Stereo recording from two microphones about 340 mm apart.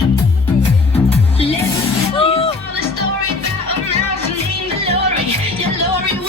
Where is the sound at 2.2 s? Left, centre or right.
Centre.